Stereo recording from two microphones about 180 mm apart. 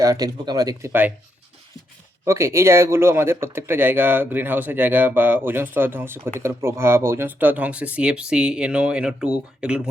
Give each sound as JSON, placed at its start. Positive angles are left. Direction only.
{"t": 0.0, "sound": "speech", "side_deg": -20}
{"t": 2.2, "sound": "speech", "side_deg": -15}